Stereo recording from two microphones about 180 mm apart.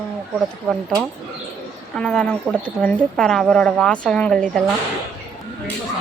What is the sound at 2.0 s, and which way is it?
Speech, 5° left (ahead or behind).